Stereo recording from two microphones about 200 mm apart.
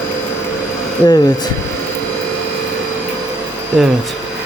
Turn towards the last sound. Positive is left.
turn(degrees=0)  # may be behind; listen again after turning